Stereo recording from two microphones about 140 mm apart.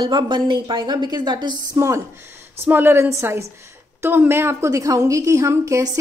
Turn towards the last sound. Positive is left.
turn(degrees=-20)  # may be behind; listen again after turning